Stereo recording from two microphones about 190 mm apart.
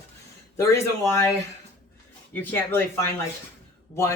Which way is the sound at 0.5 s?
15° left (ahead or behind).